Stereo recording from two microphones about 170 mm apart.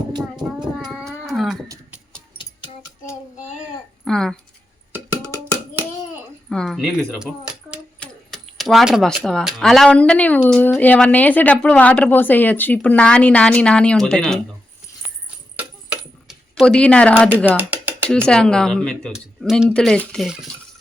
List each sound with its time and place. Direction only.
0.1 s speech: 25° right (ahead or behind)
0.9 s dog: centre (ahead or behind)
4.0 s speech: 5° left (ahead or behind)
4.9 s a sound: 15° right (ahead or behind)
6.5 s speech: centre (ahead or behind)
7.1 s keys jangling: 5° right (ahead or behind)
7.9 s speech: 5° left (ahead or behind)
15.5 s a sound: 5° right (ahead or behind)
17.2 s speech: 10° right (ahead or behind)
17.6 s music: 10° right (ahead or behind)
18.3 s speech: 5° left (ahead or behind)